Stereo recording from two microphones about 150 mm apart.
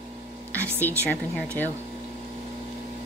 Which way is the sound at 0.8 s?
15° left (ahead or behind).